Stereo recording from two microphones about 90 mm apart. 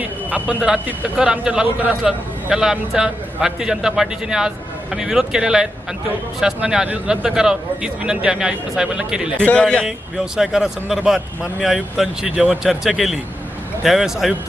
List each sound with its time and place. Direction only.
0.0 s a sound: 15° right (ahead or behind)
0.9 s a man's voice: 10° right (ahead or behind)
9.4 s a man's voice: 10° left (ahead or behind)
10.3 s speech: 5° right (ahead or behind)